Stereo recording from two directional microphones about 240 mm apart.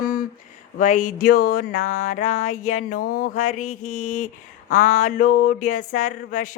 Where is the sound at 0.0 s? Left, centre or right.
Left.